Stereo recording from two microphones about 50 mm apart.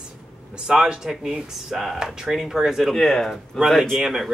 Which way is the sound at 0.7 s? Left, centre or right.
Centre.